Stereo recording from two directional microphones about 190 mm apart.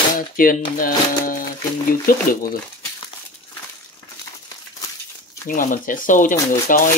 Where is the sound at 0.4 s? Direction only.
45° left (ahead or behind).